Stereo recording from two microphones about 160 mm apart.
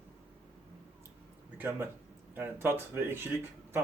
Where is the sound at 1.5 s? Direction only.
10° right (ahead or behind).